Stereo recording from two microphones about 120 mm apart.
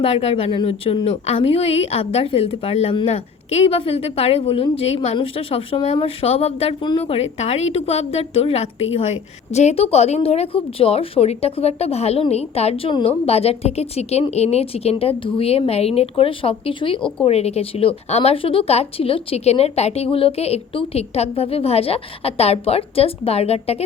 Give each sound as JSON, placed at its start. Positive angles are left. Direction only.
{"t": 0.0, "sound": "a woman's voice", "side_deg": 60}
{"t": 6.8, "sound": "a woman's voice", "side_deg": 40}
{"t": 7.2, "sound": "a woman's voice", "side_deg": 65}
{"t": 17.2, "sound": "a woman's voice", "side_deg": 60}